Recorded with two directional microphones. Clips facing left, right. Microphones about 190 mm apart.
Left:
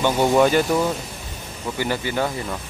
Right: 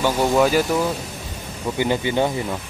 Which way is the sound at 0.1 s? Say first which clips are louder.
Left 1 dB; 10° left (ahead or behind).